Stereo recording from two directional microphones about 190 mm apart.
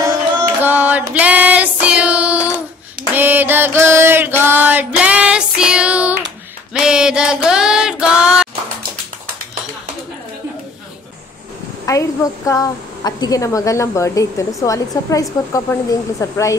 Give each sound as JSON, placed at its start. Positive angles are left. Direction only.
{"t": 0.7, "sound": "female singing", "side_deg": -10}
{"t": 3.2, "sound": "mantra", "side_deg": -10}
{"t": 6.7, "sound": "a sound", "side_deg": -5}
{"t": 11.8, "sound": "a woman's voice", "side_deg": 15}